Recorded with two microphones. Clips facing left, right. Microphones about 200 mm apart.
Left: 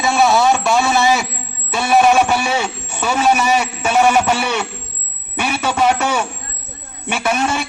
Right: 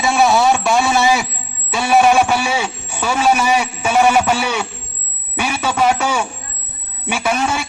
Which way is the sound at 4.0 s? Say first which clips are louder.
Even; 5° right (ahead or behind).